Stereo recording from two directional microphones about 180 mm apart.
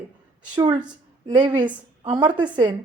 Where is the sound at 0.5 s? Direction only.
25° right (ahead or behind).